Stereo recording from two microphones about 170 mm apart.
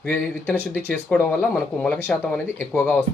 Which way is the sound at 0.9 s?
5° left (ahead or behind).